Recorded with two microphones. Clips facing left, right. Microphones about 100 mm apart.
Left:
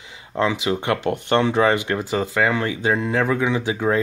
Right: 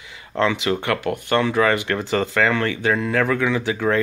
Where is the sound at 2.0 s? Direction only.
10° left (ahead or behind).